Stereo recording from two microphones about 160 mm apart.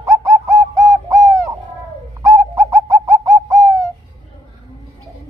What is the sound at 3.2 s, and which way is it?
Bird, 20° right (ahead or behind).